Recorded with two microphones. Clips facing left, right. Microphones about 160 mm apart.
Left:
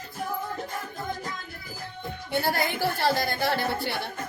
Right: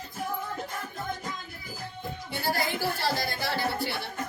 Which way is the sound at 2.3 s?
60° left (ahead or behind).